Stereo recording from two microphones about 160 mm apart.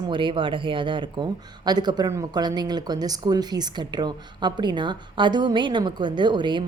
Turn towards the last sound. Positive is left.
turn(degrees=-30)  # may be behind; listen again after turning